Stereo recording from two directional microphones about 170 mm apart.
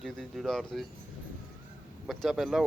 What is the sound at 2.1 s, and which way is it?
Speech, centre (ahead or behind).